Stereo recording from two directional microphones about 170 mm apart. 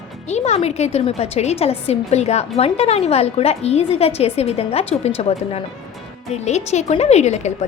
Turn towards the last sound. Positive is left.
turn(degrees=40)  # may be behind; listen again after turning